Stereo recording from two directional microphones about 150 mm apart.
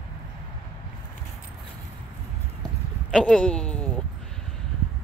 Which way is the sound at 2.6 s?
5° left (ahead or behind).